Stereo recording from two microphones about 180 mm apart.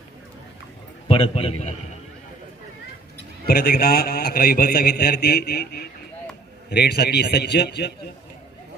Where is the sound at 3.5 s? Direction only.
60° left (ahead or behind).